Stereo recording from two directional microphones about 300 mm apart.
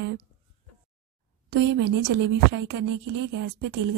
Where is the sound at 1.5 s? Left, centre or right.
Right.